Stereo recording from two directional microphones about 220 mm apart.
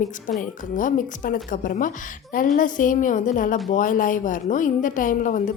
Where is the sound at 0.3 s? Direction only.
35° left (ahead or behind).